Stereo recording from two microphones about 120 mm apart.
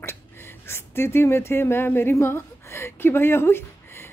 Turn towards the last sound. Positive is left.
turn(degrees=20)  # may be behind; listen again after turning